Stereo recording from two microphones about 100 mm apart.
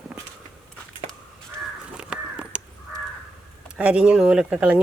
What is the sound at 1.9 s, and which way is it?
Crow, 10° right (ahead or behind).